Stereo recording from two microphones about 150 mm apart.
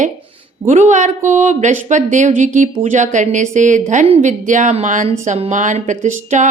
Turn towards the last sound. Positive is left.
turn(degrees=-55)  # may be behind; listen again after turning